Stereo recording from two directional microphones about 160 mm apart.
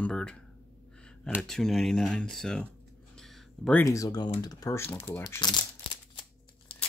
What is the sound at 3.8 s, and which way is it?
Speech, 20° left (ahead or behind).